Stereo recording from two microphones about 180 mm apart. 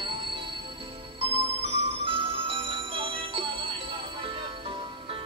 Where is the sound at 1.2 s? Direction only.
35° right (ahead or behind).